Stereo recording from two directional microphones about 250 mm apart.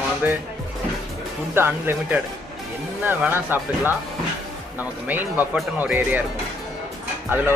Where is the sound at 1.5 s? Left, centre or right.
Centre.